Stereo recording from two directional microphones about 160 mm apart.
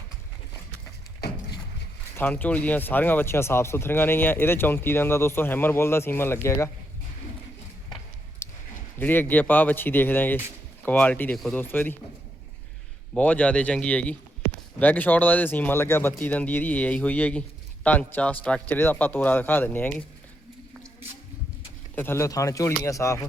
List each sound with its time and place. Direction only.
1.2 s a sound: 90° left
2.1 s speech: 10° left (ahead or behind)
8.4 s a sound: 15° left (ahead or behind)
9.0 s speech: 10° left (ahead or behind)
13.1 s speech: 10° left (ahead or behind)
21.9 s speech: 15° left (ahead or behind)